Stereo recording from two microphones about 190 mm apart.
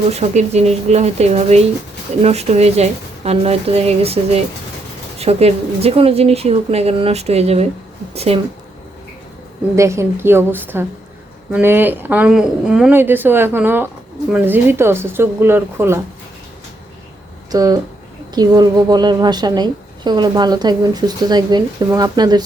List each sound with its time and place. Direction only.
0.1 s speech: 35° right (ahead or behind)
9.7 s speech: 15° right (ahead or behind)
17.5 s a woman's voice: 20° right (ahead or behind)